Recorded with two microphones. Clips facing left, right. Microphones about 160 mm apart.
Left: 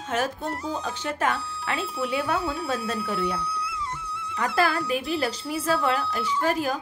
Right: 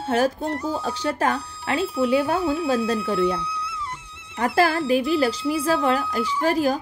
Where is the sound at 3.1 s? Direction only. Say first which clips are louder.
Right 6 dB; 25° right (ahead or behind).